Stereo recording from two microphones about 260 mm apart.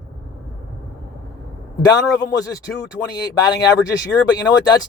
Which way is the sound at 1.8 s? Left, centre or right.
Centre.